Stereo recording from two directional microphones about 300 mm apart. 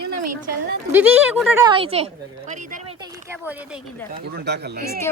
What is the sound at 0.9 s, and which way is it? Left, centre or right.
Speech, centre.